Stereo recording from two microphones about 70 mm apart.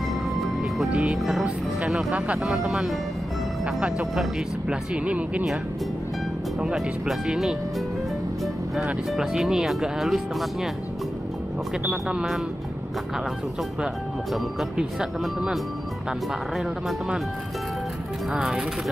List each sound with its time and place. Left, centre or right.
0.4 s music: centre
0.9 s speech: centre
2.1 s speech: centre
2.4 s speech: centre
4.6 s speech: centre
6.6 s speech: centre
9.1 s speech: centre
11.8 s speech: centre
14.8 s speech: centre
18.3 s speech: centre